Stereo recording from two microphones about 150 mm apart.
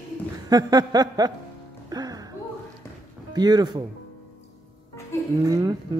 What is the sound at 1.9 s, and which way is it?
Music, 25° right (ahead or behind).